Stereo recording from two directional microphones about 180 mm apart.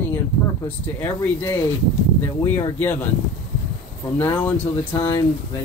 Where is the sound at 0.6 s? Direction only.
15° left (ahead or behind).